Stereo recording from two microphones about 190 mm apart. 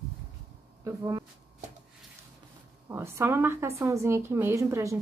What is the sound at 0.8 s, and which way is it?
Speech, 15° right (ahead or behind).